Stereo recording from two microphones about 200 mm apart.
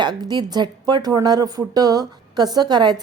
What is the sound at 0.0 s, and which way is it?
Speech, 20° right (ahead or behind).